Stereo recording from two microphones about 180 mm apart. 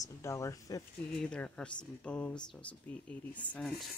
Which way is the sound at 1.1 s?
5° left (ahead or behind).